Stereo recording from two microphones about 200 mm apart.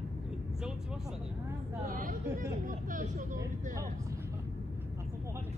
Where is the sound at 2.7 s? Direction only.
40° right (ahead or behind).